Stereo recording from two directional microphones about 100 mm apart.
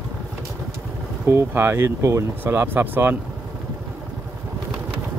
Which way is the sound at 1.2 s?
20° right (ahead or behind).